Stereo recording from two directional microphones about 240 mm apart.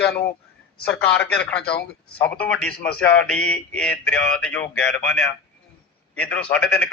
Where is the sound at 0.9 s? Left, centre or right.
Centre.